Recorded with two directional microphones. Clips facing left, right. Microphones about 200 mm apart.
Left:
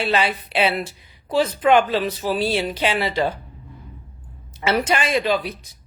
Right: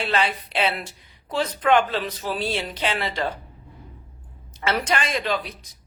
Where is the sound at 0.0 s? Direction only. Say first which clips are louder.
Left 3 dB; 10° left (ahead or behind).